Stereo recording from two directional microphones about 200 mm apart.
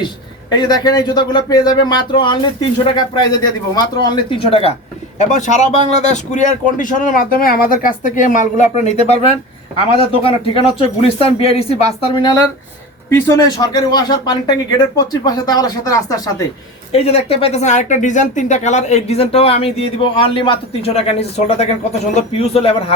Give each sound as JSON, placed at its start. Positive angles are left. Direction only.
{"t": 0.5, "sound": "speech", "side_deg": 20}
{"t": 16.9, "sound": "speech", "side_deg": 30}